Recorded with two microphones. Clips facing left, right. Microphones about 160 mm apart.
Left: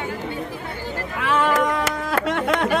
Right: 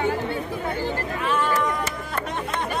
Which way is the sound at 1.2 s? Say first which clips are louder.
Left 4 dB; 90° left.